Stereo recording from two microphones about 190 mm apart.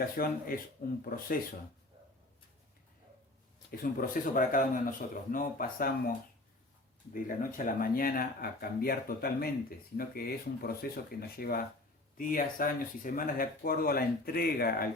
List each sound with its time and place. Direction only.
0.2 s speech: 50° left (ahead or behind)
3.8 s speech: 45° left (ahead or behind)
7.1 s speech: 45° left (ahead or behind)